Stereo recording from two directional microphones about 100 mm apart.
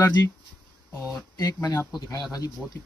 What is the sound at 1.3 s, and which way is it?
A man's voice, 40° left (ahead or behind).